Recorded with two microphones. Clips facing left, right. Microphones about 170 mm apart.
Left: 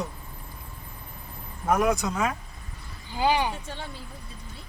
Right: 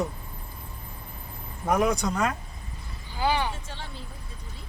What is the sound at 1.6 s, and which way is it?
Speech, centre (ahead or behind).